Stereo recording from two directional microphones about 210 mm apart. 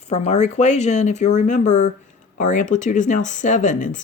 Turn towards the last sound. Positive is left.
turn(degrees=35)  # may be behind; listen again after turning